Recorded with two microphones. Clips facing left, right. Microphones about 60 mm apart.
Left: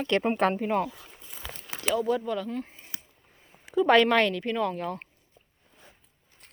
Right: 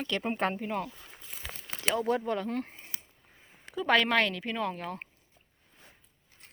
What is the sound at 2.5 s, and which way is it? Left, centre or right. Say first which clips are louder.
Speech: even; right.